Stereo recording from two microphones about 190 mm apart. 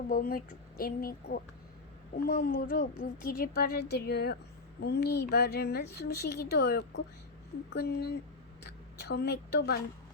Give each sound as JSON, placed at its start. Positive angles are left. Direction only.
{"t": 0.1, "sound": "a woman's voice", "side_deg": 50}